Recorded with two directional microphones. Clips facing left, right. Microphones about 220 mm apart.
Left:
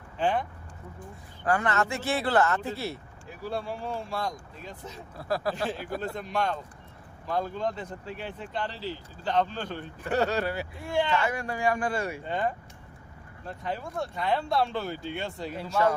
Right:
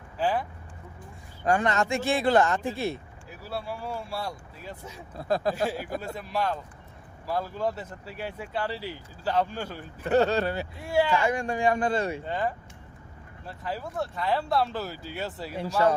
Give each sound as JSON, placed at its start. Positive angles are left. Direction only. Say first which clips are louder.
{"t": 0.2, "sound": "speech", "louder": "even", "side_deg": -5}
{"t": 1.5, "sound": "speech", "louder": "right 2 dB", "side_deg": -20}
{"t": 5.1, "sound": "speech", "louder": "right 3 dB", "side_deg": -20}
{"t": 5.6, "sound": "speech", "louder": "right 1 dB", "side_deg": -10}
{"t": 10.8, "sound": "speech", "louder": "right 3 dB", "side_deg": -10}
{"t": 12.2, "sound": "speech", "louder": "even", "side_deg": 0}
{"t": 13.5, "sound": "speech", "louder": "even", "side_deg": -5}